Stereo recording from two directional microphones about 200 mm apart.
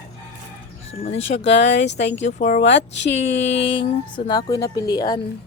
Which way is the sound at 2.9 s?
65° left (ahead or behind).